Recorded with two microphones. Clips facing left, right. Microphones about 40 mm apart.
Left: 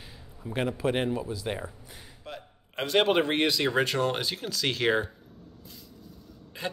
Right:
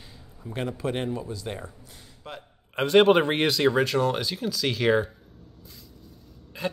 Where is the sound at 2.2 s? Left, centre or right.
Centre.